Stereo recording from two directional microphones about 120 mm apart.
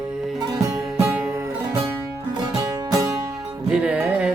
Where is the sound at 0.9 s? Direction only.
15° right (ahead or behind).